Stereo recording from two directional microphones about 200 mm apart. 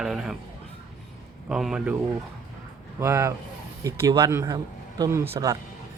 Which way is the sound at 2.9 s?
15° right (ahead or behind).